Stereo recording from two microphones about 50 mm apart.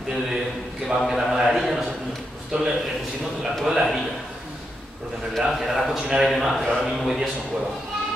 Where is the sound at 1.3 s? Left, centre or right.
Centre.